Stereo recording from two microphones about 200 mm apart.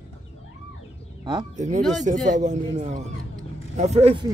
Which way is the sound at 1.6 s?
35° right (ahead or behind).